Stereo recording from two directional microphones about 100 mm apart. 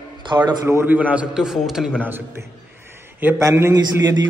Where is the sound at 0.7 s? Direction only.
25° right (ahead or behind).